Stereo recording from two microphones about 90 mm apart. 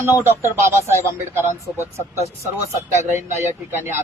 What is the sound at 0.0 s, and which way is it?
Speech, 25° right (ahead or behind).